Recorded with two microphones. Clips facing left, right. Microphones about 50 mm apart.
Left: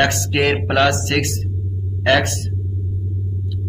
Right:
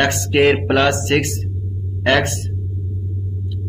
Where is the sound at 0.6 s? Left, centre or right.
Centre.